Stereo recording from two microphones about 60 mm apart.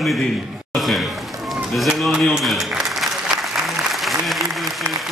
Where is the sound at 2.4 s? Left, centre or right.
Centre.